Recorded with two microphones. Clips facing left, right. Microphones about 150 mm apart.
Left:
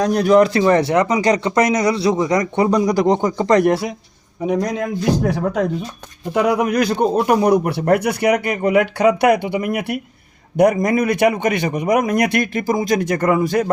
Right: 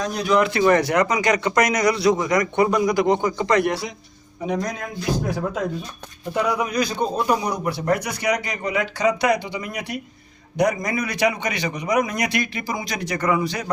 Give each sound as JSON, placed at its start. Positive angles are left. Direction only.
{"t": 0.0, "sound": "speech", "side_deg": 55}
{"t": 0.3, "sound": "speech", "side_deg": 40}
{"t": 0.6, "sound": "speech", "side_deg": 30}
{"t": 5.2, "sound": "a man's voice", "side_deg": 70}